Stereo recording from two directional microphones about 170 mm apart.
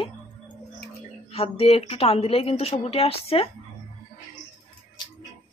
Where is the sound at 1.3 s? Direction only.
35° left (ahead or behind).